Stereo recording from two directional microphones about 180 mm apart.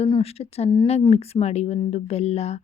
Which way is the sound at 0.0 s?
35° left (ahead or behind).